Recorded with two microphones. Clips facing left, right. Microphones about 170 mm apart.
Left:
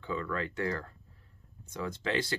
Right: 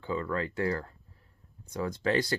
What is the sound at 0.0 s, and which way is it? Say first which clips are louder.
Speech: right 3 dB; 35° right (ahead or behind).